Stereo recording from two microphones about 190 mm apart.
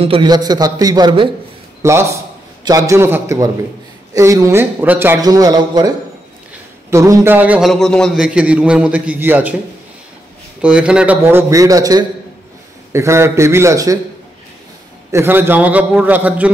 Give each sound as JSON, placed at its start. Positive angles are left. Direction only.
{"t": 0.0, "sound": "a man's voice", "side_deg": -25}
{"t": 10.6, "sound": "a man's voice", "side_deg": -5}
{"t": 15.0, "sound": "a man's voice", "side_deg": -10}